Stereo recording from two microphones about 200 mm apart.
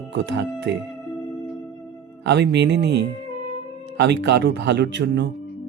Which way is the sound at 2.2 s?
60° right (ahead or behind).